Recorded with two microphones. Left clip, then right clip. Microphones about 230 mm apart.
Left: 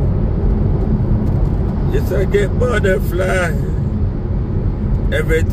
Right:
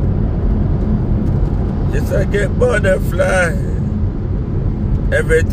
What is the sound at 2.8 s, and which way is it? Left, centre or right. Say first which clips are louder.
Speech: right 2 dB; centre.